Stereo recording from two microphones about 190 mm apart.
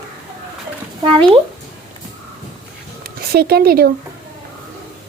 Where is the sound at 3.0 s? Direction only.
55° right (ahead or behind).